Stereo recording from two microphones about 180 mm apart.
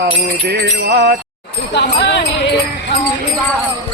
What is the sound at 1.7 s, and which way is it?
Speech, 70° left (ahead or behind).